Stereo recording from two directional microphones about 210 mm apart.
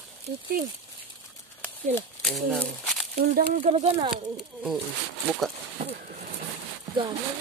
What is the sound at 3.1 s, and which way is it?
Speech, 45° right (ahead or behind).